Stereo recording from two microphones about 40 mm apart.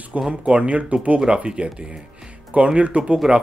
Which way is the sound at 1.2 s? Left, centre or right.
Right.